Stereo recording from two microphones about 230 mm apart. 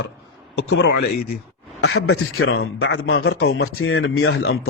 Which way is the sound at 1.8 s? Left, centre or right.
Left.